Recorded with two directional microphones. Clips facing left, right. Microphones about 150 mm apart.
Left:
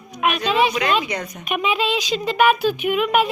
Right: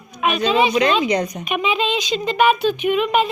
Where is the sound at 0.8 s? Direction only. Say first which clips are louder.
Right 5 dB; 30° right (ahead or behind).